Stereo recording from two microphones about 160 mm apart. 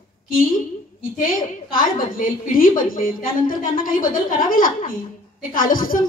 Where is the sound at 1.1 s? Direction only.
60° left (ahead or behind).